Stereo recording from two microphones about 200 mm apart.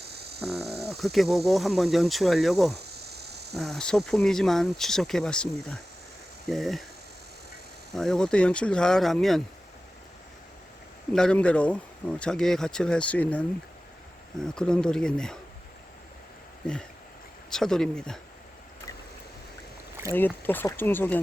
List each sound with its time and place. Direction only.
0.0 s a sound: 55° right (ahead or behind)
0.4 s speech: centre (ahead or behind)
2.7 s cricket: 55° right (ahead or behind)
3.5 s speech: centre (ahead or behind)
7.9 s speech: centre (ahead or behind)
11.1 s speech: 5° left (ahead or behind)
14.4 s speech: 5° left (ahead or behind)
17.5 s speech: centre (ahead or behind)
20.1 s speech: 10° left (ahead or behind)